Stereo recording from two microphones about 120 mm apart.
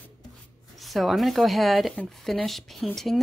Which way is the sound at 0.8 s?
Centre (ahead or behind).